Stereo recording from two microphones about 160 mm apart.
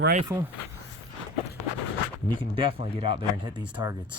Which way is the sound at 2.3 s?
30° right (ahead or behind).